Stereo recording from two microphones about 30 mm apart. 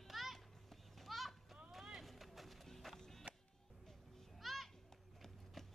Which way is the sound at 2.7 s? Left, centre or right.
Centre.